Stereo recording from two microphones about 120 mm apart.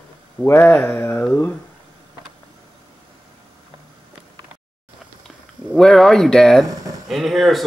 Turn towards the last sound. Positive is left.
turn(degrees=0)  # may be behind; listen again after turning